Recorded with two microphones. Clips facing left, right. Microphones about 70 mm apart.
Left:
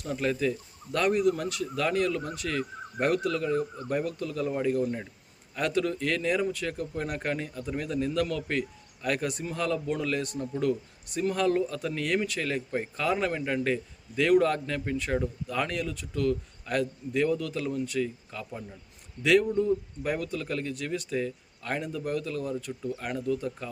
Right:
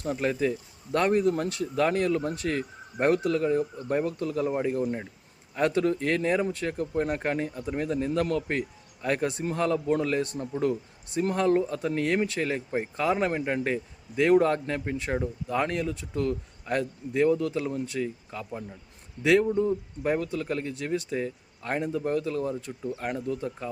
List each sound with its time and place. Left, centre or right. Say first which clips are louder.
0.0 s speech: right 1 dB; right